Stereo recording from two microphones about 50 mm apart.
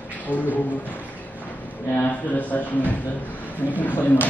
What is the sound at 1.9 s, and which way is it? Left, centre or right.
A man's voice, left.